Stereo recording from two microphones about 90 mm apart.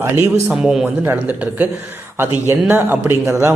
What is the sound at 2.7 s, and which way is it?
Speech, 25° right (ahead or behind).